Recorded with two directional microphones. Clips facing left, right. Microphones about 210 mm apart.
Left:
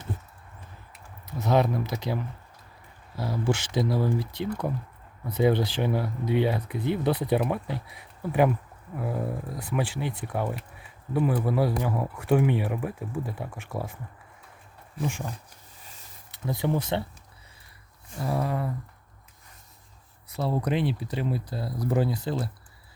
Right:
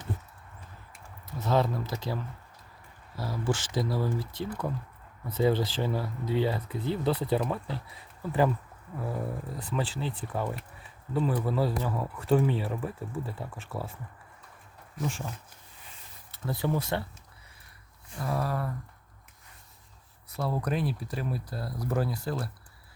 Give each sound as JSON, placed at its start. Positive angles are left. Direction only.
{"t": 1.4, "sound": "speech", "side_deg": 15}
{"t": 3.2, "sound": "speech", "side_deg": 20}
{"t": 3.5, "sound": "speech", "side_deg": 65}
{"t": 3.8, "sound": "speech", "side_deg": 20}
{"t": 4.2, "sound": "speech", "side_deg": 65}
{"t": 5.3, "sound": "speech", "side_deg": 15}
{"t": 15.0, "sound": "speech", "side_deg": 15}
{"t": 16.3, "sound": "speech", "side_deg": 15}
{"t": 18.2, "sound": "speech", "side_deg": 25}
{"t": 20.3, "sound": "speech", "side_deg": 25}